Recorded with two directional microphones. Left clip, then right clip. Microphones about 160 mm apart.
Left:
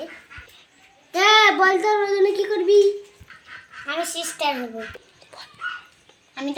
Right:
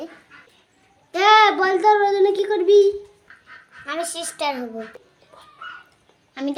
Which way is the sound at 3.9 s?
40° right (ahead or behind).